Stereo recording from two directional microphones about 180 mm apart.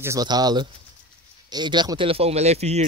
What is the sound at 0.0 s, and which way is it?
Speech, 20° right (ahead or behind).